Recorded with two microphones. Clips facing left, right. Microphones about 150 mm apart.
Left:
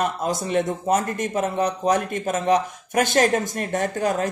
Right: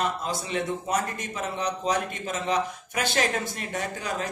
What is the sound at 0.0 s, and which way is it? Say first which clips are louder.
A man's voice: left 5 dB; 45° left (ahead or behind).